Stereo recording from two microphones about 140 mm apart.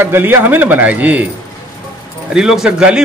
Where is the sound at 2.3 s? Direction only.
5° right (ahead or behind).